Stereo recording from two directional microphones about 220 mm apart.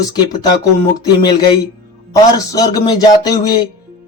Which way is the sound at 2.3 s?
15° left (ahead or behind).